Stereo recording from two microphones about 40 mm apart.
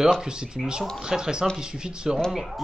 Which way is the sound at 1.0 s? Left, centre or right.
Centre.